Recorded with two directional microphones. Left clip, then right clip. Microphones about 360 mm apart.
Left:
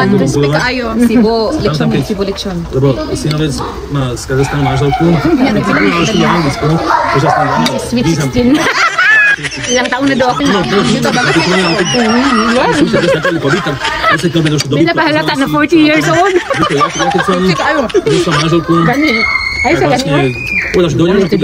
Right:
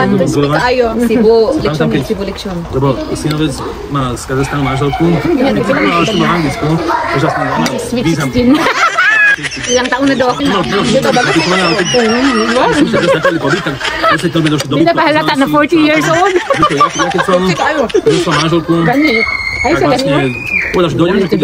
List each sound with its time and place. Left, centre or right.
0.6 s speech: centre
8.0 s speech: centre
19.6 s speech: centre